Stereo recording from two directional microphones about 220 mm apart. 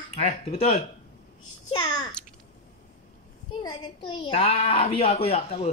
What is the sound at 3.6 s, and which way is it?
A child's voice, 20° left (ahead or behind).